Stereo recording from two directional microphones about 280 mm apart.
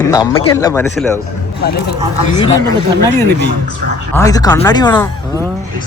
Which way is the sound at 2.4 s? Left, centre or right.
Centre.